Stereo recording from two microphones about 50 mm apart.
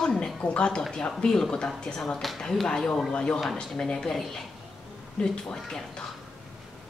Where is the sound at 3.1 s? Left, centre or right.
Left.